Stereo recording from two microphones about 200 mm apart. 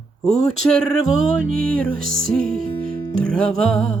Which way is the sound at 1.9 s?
45° right (ahead or behind).